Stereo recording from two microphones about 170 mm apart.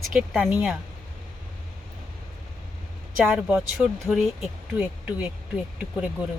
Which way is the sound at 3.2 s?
5° right (ahead or behind).